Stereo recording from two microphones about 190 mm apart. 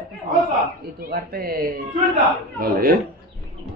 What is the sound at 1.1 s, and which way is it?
A man's voice, 50° right (ahead or behind).